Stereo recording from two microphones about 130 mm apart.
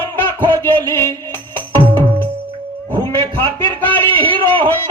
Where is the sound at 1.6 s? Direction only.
40° right (ahead or behind).